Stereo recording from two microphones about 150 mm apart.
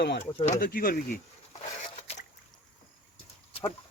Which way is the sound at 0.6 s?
75° left (ahead or behind).